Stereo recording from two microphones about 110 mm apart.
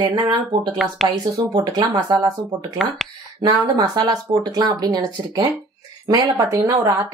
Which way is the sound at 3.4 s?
40° right (ahead or behind).